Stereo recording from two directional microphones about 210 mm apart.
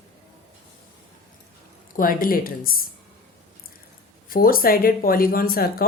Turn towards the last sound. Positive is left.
turn(degrees=45)  # may be behind; listen again after turning